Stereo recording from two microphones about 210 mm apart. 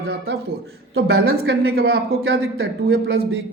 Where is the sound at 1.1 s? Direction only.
50° right (ahead or behind).